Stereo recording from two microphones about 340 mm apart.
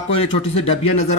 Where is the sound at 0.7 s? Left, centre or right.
Left.